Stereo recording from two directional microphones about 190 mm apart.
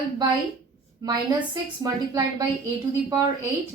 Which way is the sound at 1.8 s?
20° right (ahead or behind).